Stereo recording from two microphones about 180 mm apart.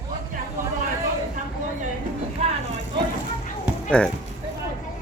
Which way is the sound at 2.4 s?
35° right (ahead or behind).